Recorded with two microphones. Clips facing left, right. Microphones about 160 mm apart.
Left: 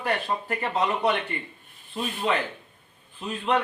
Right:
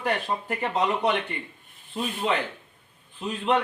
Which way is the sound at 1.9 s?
Centre (ahead or behind).